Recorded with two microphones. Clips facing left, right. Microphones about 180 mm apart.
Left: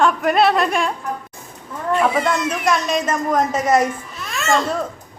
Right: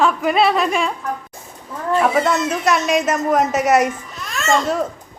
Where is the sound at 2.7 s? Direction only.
5° right (ahead or behind).